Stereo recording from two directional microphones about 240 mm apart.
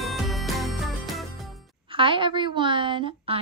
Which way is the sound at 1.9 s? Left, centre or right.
Right.